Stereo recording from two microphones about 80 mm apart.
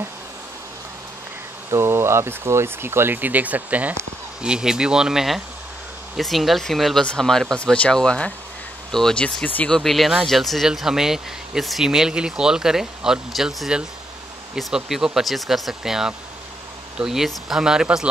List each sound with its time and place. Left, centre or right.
1.7 s speech: right; by 9.7 s centre
9.7 s speech: centre